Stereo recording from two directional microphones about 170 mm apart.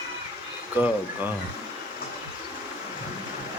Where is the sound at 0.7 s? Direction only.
10° right (ahead or behind).